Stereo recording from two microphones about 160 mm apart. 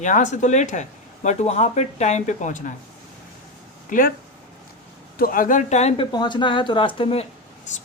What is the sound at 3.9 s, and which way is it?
Speech, 60° left (ahead or behind).